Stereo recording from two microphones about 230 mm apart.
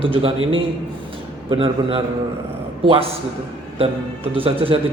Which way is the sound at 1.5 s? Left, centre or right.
Right.